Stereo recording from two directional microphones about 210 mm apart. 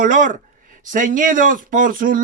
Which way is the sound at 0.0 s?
40° right (ahead or behind).